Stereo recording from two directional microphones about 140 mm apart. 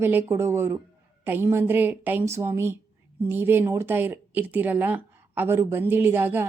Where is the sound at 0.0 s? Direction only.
15° right (ahead or behind).